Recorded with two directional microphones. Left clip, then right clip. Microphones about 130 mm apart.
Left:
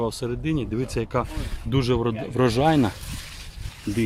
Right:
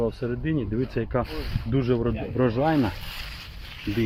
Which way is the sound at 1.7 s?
40° left (ahead or behind).